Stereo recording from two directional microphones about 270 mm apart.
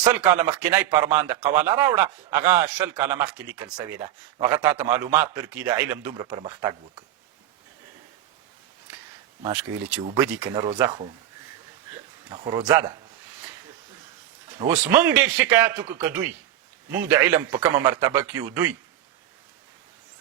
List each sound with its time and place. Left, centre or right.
0.0 s speech: centre
9.4 s speech: centre
10.0 s speech: centre
12.3 s speech: centre
14.6 s speech: centre